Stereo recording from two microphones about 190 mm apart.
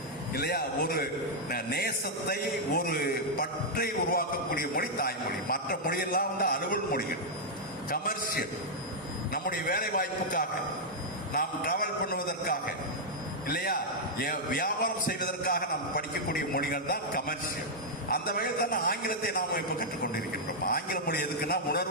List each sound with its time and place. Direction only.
0.3 s a man's voice: 55° left (ahead or behind)